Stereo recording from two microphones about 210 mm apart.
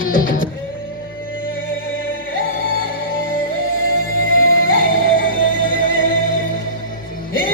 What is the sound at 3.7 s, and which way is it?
Music, 75° left (ahead or behind).